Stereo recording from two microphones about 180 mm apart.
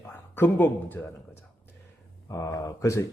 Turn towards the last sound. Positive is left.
turn(degrees=15)  # may be behind; listen again after turning